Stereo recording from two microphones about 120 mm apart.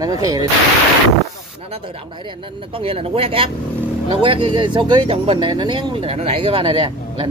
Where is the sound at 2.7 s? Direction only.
50° right (ahead or behind).